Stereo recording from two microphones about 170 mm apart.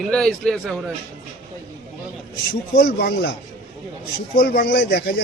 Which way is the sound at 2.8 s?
65° left (ahead or behind).